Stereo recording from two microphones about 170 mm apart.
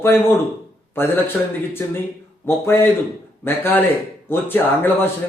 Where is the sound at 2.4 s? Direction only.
15° left (ahead or behind).